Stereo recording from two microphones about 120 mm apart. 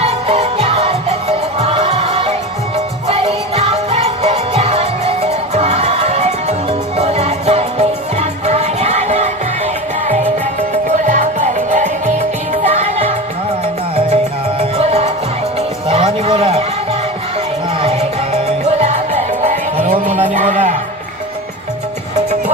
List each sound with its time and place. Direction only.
0.0 s music: 55° right (ahead or behind)
10.9 s music: 90° right
12.6 s music: 55° right (ahead or behind)
14.6 s music: 55° right (ahead or behind)
15.9 s a sound: 55° right (ahead or behind)
17.7 s music: 55° right (ahead or behind)
18.6 s music: 70° right (ahead or behind)
20.3 s music: 90° right